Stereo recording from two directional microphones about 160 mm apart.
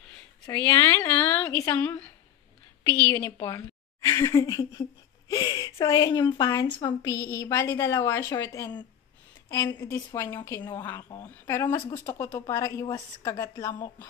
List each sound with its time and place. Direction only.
0.5 s a woman's voice: 15° left (ahead or behind)
3.3 s a woman's voice: 25° left (ahead or behind)
4.0 s a woman's voice: 15° left (ahead or behind)